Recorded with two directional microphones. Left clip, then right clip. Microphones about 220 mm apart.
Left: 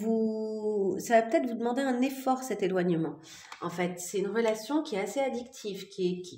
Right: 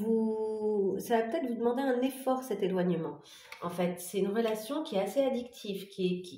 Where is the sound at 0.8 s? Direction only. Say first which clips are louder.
Left 4 dB; 35° left (ahead or behind).